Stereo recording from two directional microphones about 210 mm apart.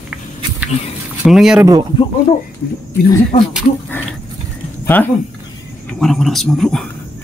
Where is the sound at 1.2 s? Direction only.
Centre (ahead or behind).